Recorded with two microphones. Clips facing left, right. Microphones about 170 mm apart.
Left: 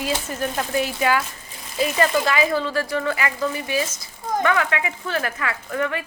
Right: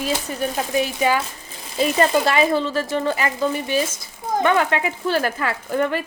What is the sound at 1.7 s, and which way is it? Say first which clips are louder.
A woman's voice: right 2 dB; 30° right (ahead or behind).